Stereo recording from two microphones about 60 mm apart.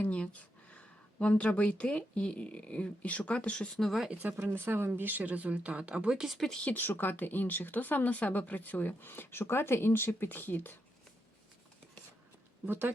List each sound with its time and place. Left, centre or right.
0.0 s speech: left
3.8 s speech: centre
4.1 s a woman's voice: right
6.2 s speech: centre
6.5 s speech: centre
6.7 s speech: left
12.6 s a woman's voice: right